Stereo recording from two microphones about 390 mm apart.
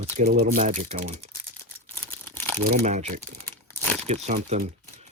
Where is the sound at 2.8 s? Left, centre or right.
Centre.